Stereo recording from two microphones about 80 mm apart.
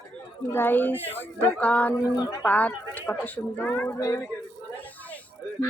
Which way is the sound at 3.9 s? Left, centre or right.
Left.